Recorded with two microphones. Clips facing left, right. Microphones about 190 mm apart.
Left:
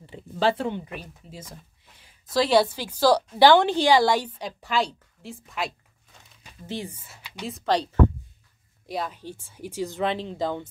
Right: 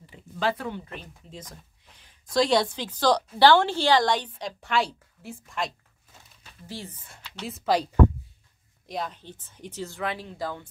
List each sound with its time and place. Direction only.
0.0 s a sound: 30° left (ahead or behind)
2.3 s a woman's voice: 5° left (ahead or behind)
6.4 s speech: 15° left (ahead or behind)
7.4 s speech: 5° right (ahead or behind)
8.8 s a woman's voice: 5° left (ahead or behind); by 10.7 s 20° left (ahead or behind)